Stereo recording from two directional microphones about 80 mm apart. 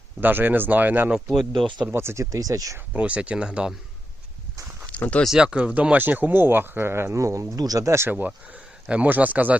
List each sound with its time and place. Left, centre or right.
0.2 s speech: right
1.1 s speech: centre
1.9 s speech: right
2.3 s speech: right
2.7 s speech: centre
4.9 s speech: centre
5.2 s speech: centre; by 8.1 s right
8.3 s speech: centre